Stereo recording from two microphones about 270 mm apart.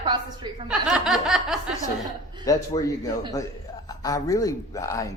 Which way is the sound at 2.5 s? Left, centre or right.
Centre.